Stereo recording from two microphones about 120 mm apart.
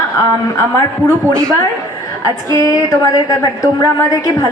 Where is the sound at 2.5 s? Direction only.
30° left (ahead or behind).